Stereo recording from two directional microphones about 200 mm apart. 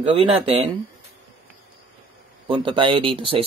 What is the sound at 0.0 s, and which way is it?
Speech, 25° right (ahead or behind).